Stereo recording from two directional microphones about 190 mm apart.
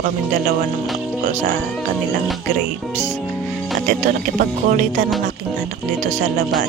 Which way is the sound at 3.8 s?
40° right (ahead or behind).